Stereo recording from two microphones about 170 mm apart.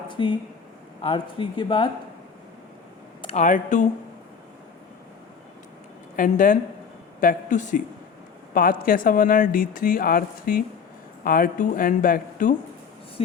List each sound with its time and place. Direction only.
0.1 s speech: 30° left (ahead or behind)
3.2 s speech: 40° left (ahead or behind)
6.1 s speech: 50° left (ahead or behind)
13.2 s a sound: 35° left (ahead or behind)